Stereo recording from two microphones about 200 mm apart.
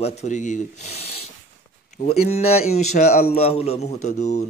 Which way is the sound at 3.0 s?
45° left (ahead or behind).